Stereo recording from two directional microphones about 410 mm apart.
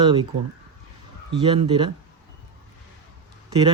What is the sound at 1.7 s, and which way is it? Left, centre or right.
Speech, centre.